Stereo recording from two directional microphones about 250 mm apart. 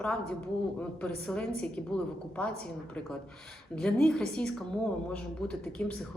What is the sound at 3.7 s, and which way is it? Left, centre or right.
Speech, centre.